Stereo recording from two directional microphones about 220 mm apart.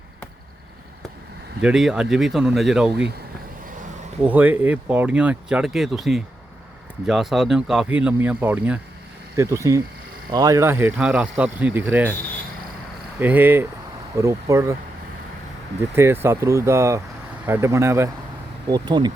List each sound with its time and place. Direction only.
1.6 s speech: 5° right (ahead or behind)
2.9 s speech: 50° right (ahead or behind)
4.2 s speech: 5° right (ahead or behind)
13.1 s speech: 10° right (ahead or behind)
16.2 s speech: 10° right (ahead or behind)